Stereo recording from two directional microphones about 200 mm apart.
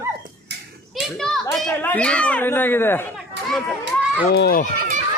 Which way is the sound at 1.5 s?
5° left (ahead or behind).